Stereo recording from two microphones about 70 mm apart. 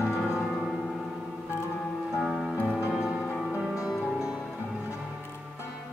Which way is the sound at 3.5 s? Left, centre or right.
Centre.